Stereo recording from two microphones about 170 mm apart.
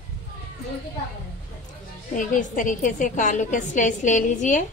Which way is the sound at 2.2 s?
50° left (ahead or behind).